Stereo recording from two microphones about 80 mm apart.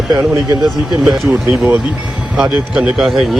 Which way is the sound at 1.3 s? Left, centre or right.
Centre.